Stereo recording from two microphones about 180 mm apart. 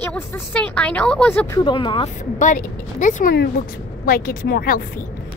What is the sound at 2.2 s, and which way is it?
A woman's voice, 45° left (ahead or behind).